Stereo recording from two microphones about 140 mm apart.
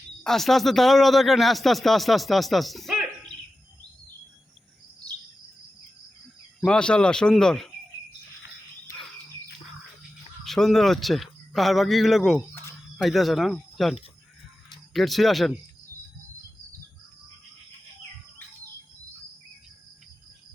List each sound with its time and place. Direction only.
0.2 s a man's voice: centre (ahead or behind)
6.6 s a man's voice: 5° left (ahead or behind)
10.4 s a man's voice: centre (ahead or behind)